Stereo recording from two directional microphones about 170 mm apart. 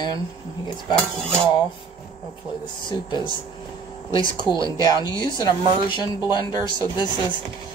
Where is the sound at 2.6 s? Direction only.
25° left (ahead or behind).